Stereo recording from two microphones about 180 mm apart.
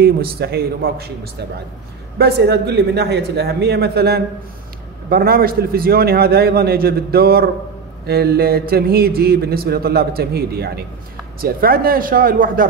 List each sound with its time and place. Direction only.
0.0 s speech: 60° right (ahead or behind)
2.1 s speech: 60° right (ahead or behind)